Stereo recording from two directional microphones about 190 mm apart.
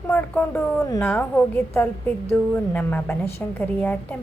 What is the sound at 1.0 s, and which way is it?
Speech, 5° left (ahead or behind).